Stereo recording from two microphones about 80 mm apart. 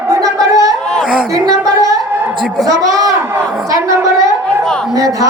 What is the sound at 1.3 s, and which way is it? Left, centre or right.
Music, right.